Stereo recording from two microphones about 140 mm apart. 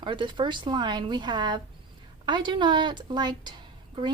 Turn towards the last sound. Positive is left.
turn(degrees=-30)  # may be behind; listen again after turning